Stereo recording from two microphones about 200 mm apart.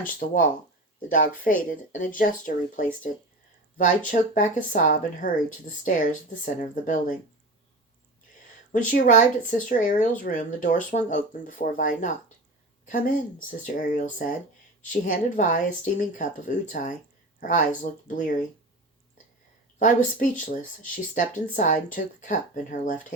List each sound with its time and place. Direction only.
0.0 s speech: 45° left (ahead or behind)
8.7 s speech: 40° left (ahead or behind)
13.7 s speech: 40° left (ahead or behind)
19.8 s speech: 40° left (ahead or behind)